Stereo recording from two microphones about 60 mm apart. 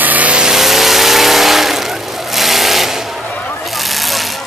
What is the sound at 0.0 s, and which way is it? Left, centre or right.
Vehicle, right.